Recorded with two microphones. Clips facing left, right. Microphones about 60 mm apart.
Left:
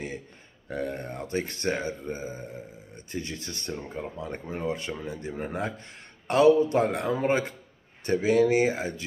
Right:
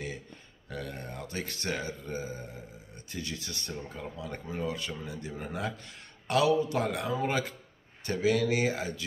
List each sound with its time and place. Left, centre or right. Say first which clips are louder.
0.7 s speech: left 7 dB; left